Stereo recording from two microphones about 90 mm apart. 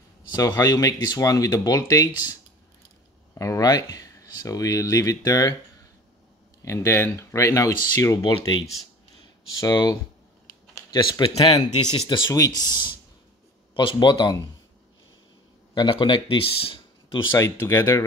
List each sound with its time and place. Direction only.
0.4 s speech: 45° left (ahead or behind)
3.3 s speech: 40° left (ahead or behind)
6.6 s speech: 30° left (ahead or behind)
9.6 s speech: 45° left (ahead or behind); by 11.5 s 75° left (ahead or behind)
11.8 s speech: 60° left (ahead or behind)
12.3 s speech: 40° left (ahead or behind)
15.7 s speech: 55° left (ahead or behind); by 17.2 s 80° left
17.3 s speech: 30° left (ahead or behind)